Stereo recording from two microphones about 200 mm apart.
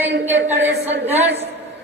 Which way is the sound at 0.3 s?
10° right (ahead or behind).